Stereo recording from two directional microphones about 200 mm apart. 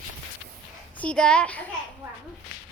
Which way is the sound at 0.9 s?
5° left (ahead or behind).